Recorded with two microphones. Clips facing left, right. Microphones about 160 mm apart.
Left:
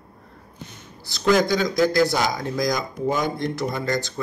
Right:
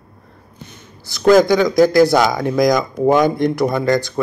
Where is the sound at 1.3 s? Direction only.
85° right.